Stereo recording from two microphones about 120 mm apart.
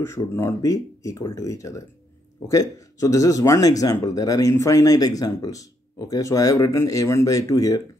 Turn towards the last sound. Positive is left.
turn(degrees=30)  # may be behind; listen again after turning